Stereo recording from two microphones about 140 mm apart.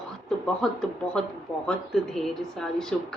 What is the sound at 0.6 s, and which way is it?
A woman's voice, 5° left (ahead or behind).